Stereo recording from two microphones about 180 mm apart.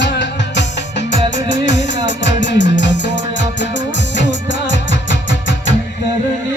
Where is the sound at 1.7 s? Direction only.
85° left.